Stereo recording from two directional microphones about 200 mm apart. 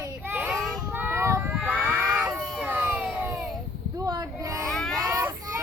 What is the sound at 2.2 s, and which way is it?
Baby cry, centre (ahead or behind).